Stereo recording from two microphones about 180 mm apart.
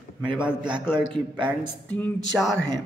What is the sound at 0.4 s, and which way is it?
Speech, 5° right (ahead or behind).